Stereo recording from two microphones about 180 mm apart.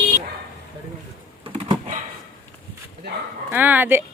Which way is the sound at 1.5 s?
25° right (ahead or behind).